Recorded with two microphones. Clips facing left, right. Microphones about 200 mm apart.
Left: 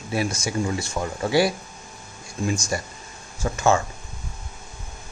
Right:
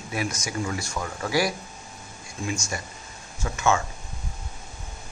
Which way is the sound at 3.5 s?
35° left (ahead or behind).